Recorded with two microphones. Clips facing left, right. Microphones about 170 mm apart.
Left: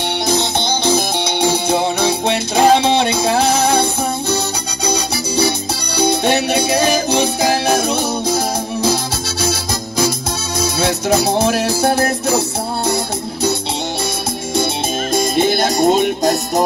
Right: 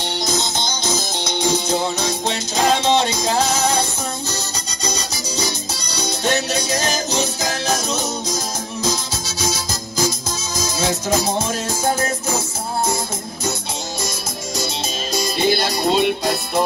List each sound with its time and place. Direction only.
0.3 s music: 60° left (ahead or behind)
4.8 s music: 60° left (ahead or behind)
15.1 s music: 50° left (ahead or behind)